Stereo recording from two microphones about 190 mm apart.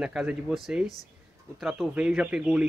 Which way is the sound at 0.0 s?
5° right (ahead or behind).